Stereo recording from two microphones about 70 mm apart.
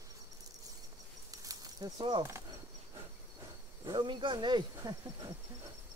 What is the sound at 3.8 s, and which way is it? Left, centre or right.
Speech, right.